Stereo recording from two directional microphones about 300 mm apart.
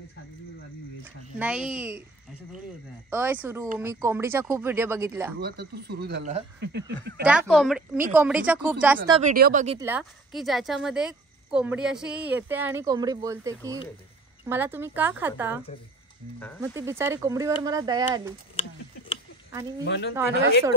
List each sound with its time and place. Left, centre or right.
1.0 s speech: centre
3.1 s speech: centre
5.4 s speech: right
7.2 s speech: centre
9.1 s speech: right
9.8 s speech: centre
16.7 s speech: centre
19.8 s speech: left